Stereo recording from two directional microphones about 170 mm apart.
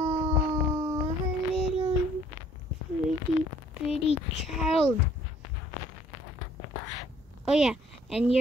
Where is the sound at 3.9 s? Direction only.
35° left (ahead or behind).